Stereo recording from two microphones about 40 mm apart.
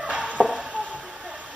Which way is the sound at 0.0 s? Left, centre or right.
Right.